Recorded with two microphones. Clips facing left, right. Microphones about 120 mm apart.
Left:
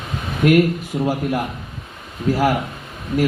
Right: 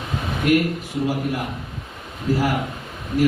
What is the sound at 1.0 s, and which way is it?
Speech, 45° left (ahead or behind).